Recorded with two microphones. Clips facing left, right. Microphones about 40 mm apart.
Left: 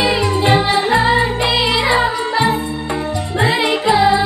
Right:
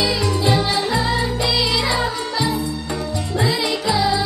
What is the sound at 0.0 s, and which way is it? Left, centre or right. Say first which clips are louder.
Music: left 4 dB; left.